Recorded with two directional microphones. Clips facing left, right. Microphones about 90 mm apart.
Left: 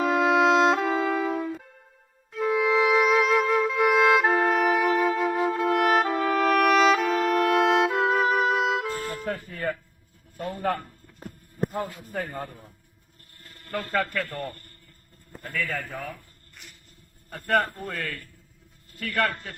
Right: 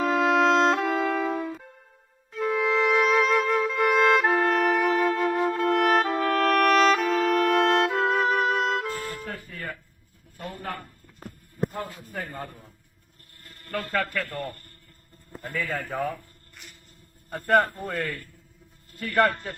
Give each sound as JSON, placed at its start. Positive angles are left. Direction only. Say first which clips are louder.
{"t": 0.0, "sound": "music", "louder": "left 1 dB", "side_deg": 5}
{"t": 9.0, "sound": "music", "louder": "left 3 dB", "side_deg": 20}
{"t": 10.3, "sound": "a sound", "louder": "left 5 dB", "side_deg": 20}
{"t": 11.7, "sound": "a sound", "louder": "left 3 dB", "side_deg": 20}
{"t": 13.5, "sound": "speech", "louder": "even", "side_deg": 0}
{"t": 15.4, "sound": "a man's voice", "louder": "even", "side_deg": -20}
{"t": 17.4, "sound": "a man's voice", "louder": "right 3 dB", "side_deg": -5}
{"t": 18.9, "sound": "a man's voice", "louder": "right 4 dB", "side_deg": -20}